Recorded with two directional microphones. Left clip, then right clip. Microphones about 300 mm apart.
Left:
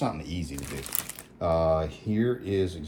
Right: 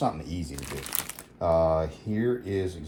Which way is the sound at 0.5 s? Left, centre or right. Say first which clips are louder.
Right 1 dB; centre.